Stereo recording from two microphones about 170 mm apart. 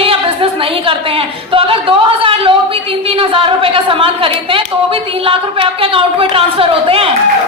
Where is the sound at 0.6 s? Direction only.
30° right (ahead or behind).